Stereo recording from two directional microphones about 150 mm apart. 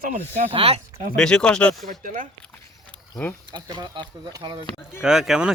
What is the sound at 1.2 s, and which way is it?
Speech, 5° left (ahead or behind).